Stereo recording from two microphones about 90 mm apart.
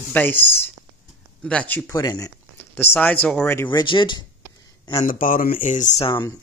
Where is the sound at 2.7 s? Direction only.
25° left (ahead or behind).